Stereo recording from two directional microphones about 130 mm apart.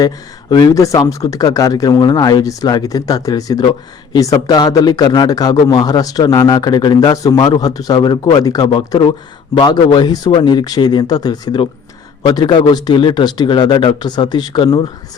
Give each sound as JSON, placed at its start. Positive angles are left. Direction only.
{"t": 0.5, "sound": "speech", "side_deg": 25}